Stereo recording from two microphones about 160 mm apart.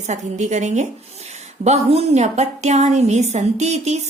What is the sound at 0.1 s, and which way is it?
A woman's voice, 45° right (ahead or behind).